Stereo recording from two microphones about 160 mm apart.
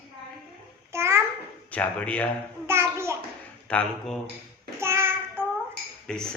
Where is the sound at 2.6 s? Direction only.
15° right (ahead or behind).